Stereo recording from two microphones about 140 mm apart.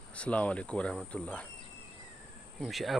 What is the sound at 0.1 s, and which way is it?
Speech, 10° left (ahead or behind).